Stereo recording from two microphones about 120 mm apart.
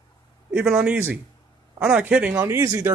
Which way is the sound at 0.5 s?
5° right (ahead or behind).